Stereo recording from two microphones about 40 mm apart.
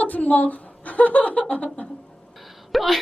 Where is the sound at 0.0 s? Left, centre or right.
Left.